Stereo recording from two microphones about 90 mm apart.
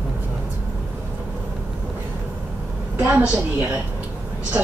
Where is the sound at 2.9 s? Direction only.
20° right (ahead or behind).